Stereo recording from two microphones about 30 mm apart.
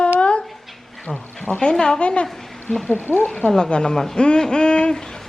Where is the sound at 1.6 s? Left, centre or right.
Left.